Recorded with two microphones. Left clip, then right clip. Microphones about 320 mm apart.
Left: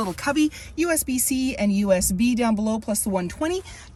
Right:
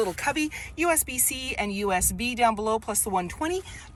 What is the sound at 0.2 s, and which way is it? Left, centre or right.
A woman's voice, centre.